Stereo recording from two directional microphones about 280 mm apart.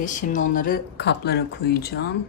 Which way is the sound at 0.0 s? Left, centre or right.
Left.